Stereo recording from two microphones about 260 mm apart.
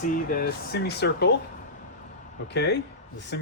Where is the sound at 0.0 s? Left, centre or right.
Left.